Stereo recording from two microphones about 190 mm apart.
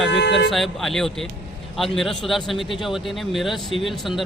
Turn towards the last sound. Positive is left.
turn(degrees=0)  # may be behind; listen again after turning